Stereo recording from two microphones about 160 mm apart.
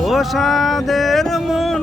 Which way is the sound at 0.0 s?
Centre (ahead or behind).